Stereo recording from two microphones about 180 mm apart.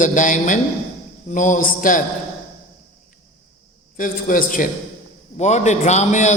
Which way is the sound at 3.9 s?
50° left (ahead or behind).